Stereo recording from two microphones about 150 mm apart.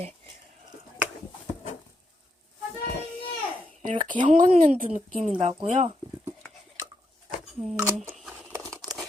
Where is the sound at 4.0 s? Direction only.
30° right (ahead or behind).